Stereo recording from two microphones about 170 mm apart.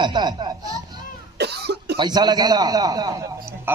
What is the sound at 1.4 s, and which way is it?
Cough, 75° right (ahead or behind).